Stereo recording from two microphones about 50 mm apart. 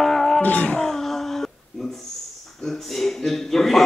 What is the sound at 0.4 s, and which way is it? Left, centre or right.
Music, left.